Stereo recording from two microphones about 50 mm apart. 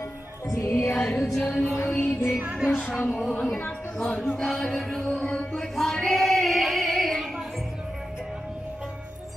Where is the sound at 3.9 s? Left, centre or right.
Left.